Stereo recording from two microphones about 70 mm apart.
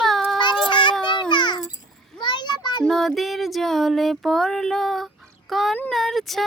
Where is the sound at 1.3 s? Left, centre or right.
Left.